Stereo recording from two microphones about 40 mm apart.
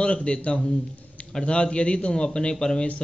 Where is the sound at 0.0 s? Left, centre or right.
Left.